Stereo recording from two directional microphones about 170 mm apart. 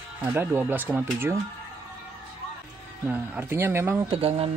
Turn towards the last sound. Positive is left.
turn(degrees=-35)  # may be behind; listen again after turning